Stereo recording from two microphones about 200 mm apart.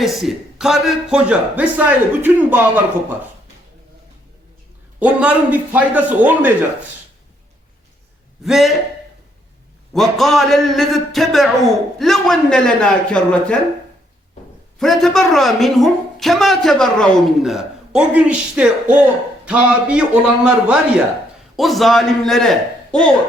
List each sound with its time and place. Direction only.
0.0 s a man's voice: centre (ahead or behind)
4.9 s a man's voice: 5° right (ahead or behind)
8.4 s a woman's voice: centre (ahead or behind)
9.9 s a woman's voice: centre (ahead or behind)
14.8 s a woman's voice: centre (ahead or behind)